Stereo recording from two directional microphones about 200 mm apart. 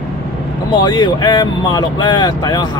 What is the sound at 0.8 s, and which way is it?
Speech, 20° left (ahead or behind).